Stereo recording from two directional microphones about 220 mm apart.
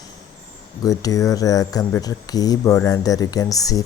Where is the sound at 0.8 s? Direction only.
15° left (ahead or behind).